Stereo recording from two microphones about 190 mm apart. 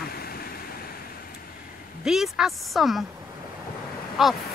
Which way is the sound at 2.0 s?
Centre (ahead or behind).